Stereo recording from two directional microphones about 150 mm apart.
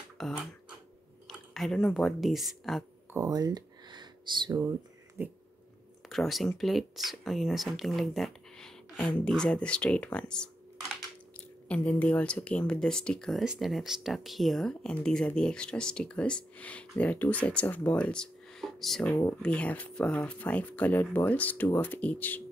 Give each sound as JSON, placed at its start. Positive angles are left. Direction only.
{"t": 0.2, "sound": "speech", "side_deg": 0}
{"t": 3.1, "sound": "a sound", "side_deg": -25}
{"t": 5.2, "sound": "dog", "side_deg": -15}
{"t": 6.0, "sound": "speech", "side_deg": 0}
{"t": 11.6, "sound": "speech", "side_deg": 10}
{"t": 19.0, "sound": "speech", "side_deg": 20}
{"t": 19.4, "sound": "speech", "side_deg": 10}